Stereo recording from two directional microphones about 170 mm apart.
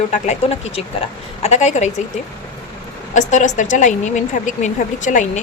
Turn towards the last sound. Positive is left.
turn(degrees=45)  # may be behind; listen again after turning